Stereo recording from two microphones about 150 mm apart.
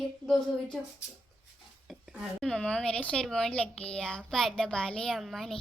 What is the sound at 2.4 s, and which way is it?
Speech, 5° left (ahead or behind).